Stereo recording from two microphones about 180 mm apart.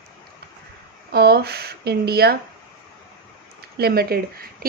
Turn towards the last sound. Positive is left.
turn(degrees=-60)  # may be behind; listen again after turning